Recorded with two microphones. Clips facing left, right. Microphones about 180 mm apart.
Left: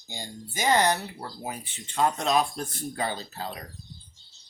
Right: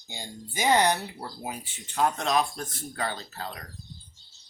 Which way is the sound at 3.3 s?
15° left (ahead or behind).